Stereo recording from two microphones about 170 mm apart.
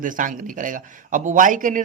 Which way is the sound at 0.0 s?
50° right (ahead or behind).